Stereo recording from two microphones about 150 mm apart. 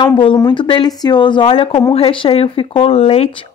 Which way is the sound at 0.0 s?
35° left (ahead or behind).